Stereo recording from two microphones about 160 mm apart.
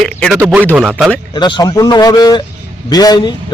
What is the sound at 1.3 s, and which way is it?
Speech, 25° left (ahead or behind).